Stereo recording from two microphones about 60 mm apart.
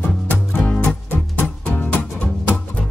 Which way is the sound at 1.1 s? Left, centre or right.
Left.